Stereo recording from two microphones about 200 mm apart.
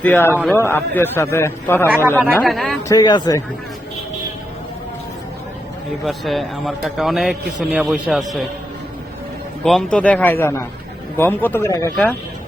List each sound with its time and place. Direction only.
0.0 s a man's voice: 10° left (ahead or behind)
1.9 s speech: 10° right (ahead or behind)
2.4 s a man's voice: centre (ahead or behind)
2.9 s speech: 20° left (ahead or behind)
6.1 s a man's voice: centre (ahead or behind)
9.6 s a man's voice: 5° left (ahead or behind)